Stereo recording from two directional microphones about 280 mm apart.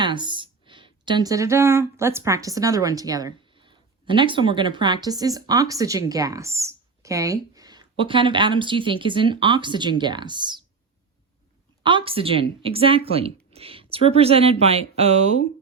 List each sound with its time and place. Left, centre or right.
0.0 s speech: centre
11.8 s speech: centre